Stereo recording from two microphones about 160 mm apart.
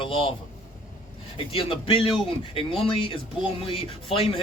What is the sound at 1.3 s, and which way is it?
Speech, 35° left (ahead or behind).